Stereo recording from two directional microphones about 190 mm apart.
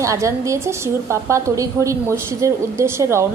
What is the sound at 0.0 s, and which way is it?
A woman's voice, 15° right (ahead or behind).